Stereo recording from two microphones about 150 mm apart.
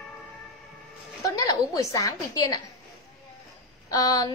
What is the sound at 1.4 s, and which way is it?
A woman's voice, 25° left (ahead or behind).